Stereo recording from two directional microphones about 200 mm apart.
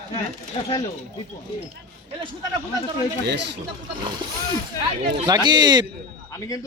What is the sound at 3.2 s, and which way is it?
Speech, 60° right (ahead or behind).